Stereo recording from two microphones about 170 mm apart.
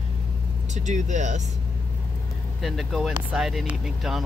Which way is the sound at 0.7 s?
45° right (ahead or behind).